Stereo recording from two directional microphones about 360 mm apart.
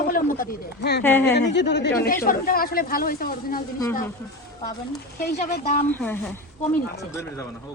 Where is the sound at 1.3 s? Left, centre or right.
Left.